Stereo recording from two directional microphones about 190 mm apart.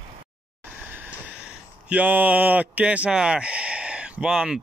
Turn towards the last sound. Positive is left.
turn(degrees=-5)  # may be behind; listen again after turning